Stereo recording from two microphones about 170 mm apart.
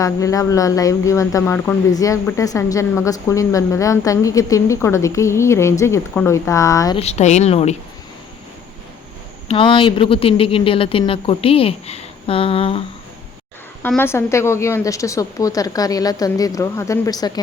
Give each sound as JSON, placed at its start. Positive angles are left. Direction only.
{"t": 0.0, "sound": "speech", "side_deg": 20}
{"t": 6.9, "sound": "speech", "side_deg": 40}
{"t": 9.5, "sound": "speech", "side_deg": 30}
{"t": 13.8, "sound": "a woman's voice", "side_deg": 10}